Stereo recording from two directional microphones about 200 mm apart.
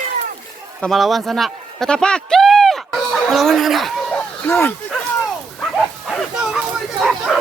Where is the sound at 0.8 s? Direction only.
Centre (ahead or behind).